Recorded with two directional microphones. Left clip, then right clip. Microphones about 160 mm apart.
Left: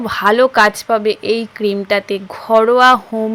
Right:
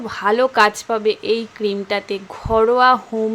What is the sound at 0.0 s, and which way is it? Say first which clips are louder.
Speech: left 5 dB; 25° left (ahead or behind).